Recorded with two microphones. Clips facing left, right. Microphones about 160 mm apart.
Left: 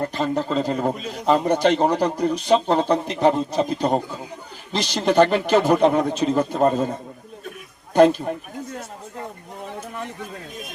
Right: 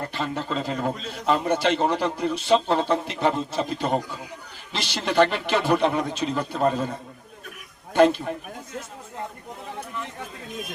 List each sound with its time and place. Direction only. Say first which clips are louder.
0.1 s a man's voice: left 6 dB; 40° left (ahead or behind)
0.8 s a man's voice: left 4 dB; 15° left (ahead or behind)
1.2 s a man's voice: left 4 dB; 40° left (ahead or behind)
7.9 s a man's voice: left 3 dB; 40° left (ahead or behind)